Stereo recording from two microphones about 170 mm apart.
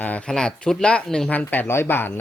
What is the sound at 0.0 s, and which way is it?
Speech, 10° left (ahead or behind).